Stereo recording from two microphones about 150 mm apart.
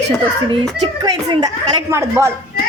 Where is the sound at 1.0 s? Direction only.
25° right (ahead or behind).